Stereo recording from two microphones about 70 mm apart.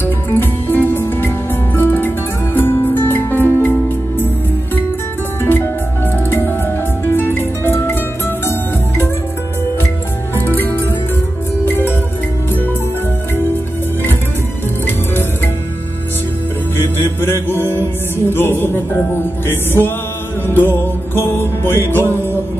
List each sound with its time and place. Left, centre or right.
0.0 s music: left
5.4 s music: left
7.1 s music: left
10.3 s music: left
16.7 s music: left